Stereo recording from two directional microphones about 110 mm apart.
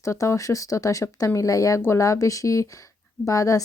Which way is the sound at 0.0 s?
25° left (ahead or behind).